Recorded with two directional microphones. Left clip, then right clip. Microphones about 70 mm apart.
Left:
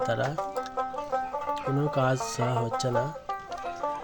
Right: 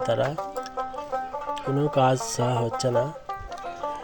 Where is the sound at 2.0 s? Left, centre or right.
Right.